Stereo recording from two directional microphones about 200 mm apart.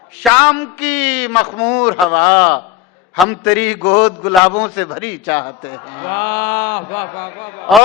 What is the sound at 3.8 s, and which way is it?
A man's voice, 25° left (ahead or behind).